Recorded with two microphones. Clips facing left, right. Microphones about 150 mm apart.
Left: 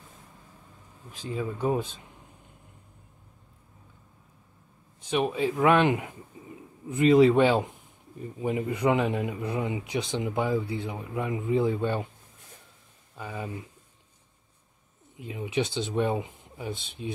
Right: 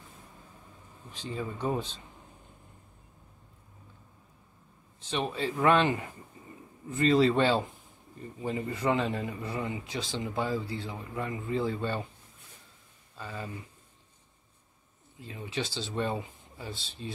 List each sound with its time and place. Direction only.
1.1 s speech: 10° left (ahead or behind)
5.1 s speech: 10° left (ahead or behind)
6.4 s a sound: 10° left (ahead or behind)
6.9 s speech: 15° left (ahead or behind)
13.2 s speech: 15° left (ahead or behind)
15.1 s speech: 15° left (ahead or behind)